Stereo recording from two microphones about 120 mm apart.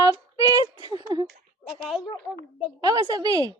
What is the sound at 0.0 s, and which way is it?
Child singing, 30° right (ahead or behind).